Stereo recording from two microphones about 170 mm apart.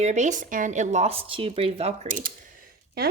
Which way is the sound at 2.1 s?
55° right (ahead or behind).